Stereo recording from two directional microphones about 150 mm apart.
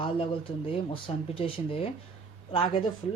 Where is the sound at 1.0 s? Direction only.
40° left (ahead or behind).